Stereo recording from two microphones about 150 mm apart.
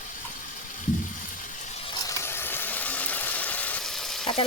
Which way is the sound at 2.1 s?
15° left (ahead or behind).